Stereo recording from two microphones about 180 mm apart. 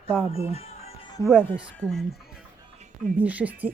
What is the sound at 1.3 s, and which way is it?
Speech, 5° left (ahead or behind).